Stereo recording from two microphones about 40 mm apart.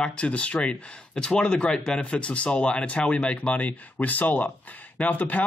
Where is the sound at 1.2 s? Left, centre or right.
Centre.